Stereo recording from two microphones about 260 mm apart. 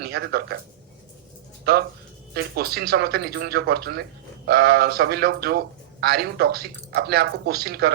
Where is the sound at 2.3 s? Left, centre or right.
Right.